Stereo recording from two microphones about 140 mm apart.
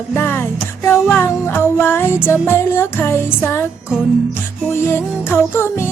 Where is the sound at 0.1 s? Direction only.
15° left (ahead or behind).